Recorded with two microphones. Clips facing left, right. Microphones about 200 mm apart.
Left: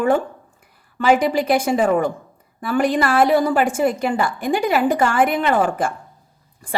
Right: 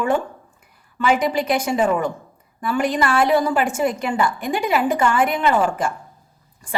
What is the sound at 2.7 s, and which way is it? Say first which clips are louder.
Speech: left 2 dB; 50° left (ahead or behind).